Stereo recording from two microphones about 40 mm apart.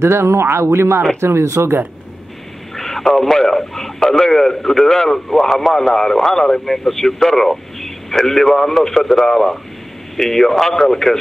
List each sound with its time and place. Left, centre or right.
0.0 s speech: right
2.7 s a man's voice: centre